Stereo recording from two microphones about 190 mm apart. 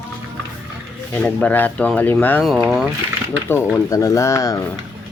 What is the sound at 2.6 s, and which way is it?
Speech, centre (ahead or behind).